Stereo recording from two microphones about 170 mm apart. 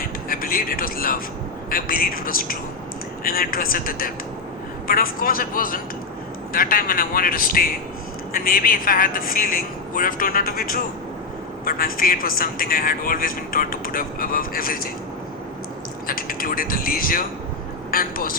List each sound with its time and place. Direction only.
0.0 s a sound: 55° left (ahead or behind)
1.7 s a man's voice: 60° left (ahead or behind)
16.0 s a man's voice: 55° left (ahead or behind)